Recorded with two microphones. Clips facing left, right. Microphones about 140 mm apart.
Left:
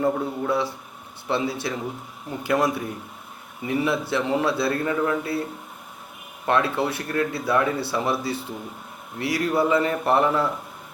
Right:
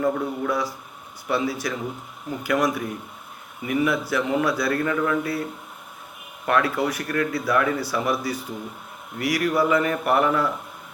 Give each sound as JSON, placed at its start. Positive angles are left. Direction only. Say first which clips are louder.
{"t": 0.0, "sound": "speech", "louder": "even", "side_deg": 25}
{"t": 6.4, "sound": "speech", "louder": "even", "side_deg": 25}